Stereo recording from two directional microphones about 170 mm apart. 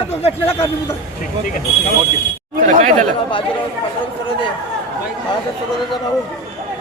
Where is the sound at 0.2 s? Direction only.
35° left (ahead or behind).